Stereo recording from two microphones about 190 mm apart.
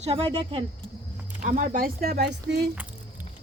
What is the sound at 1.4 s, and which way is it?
Speech, 40° right (ahead or behind).